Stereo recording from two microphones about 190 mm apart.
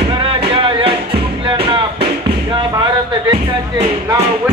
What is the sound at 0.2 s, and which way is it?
Music, 30° right (ahead or behind).